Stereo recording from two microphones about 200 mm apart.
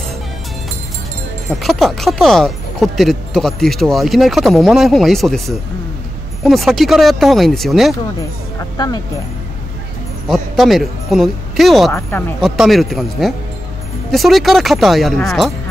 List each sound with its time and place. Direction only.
1.5 s speech: centre (ahead or behind)
8.7 s speech: 20° left (ahead or behind)
10.2 s speech: centre (ahead or behind)